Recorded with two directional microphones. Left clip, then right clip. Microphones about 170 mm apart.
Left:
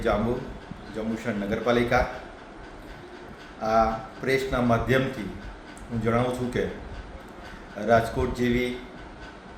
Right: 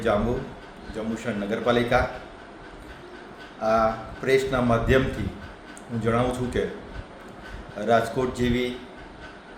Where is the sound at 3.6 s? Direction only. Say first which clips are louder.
Right 1 dB; 10° right (ahead or behind).